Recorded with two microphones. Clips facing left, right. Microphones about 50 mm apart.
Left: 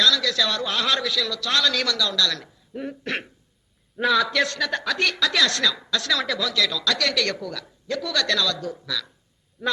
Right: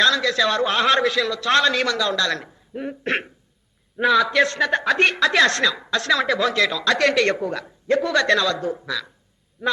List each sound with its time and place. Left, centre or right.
0.0 s a woman's voice: right
9.6 s a man's voice: centre